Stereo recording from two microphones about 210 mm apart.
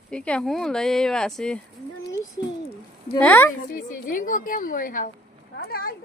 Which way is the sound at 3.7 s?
40° left (ahead or behind).